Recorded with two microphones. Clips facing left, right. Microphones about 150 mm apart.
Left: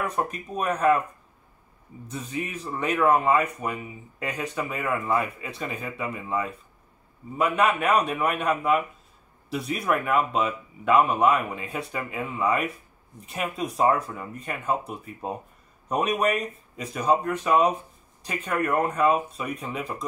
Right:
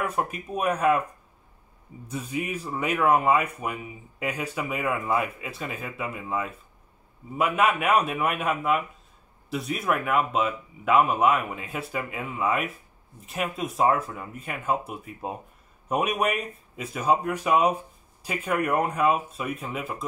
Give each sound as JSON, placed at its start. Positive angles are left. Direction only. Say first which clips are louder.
{"t": 0.0, "sound": "speech", "louder": "even", "side_deg": -5}
{"t": 2.0, "sound": "speech", "louder": "right 2 dB", "side_deg": -10}